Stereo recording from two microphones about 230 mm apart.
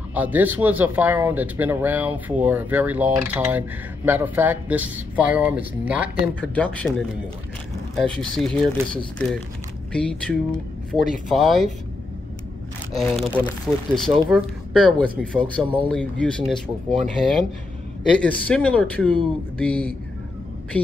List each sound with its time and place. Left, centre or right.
0.1 s speech: centre
6.4 s speech: centre
12.9 s speech: centre
15.6 s speech: centre
15.9 s speech: centre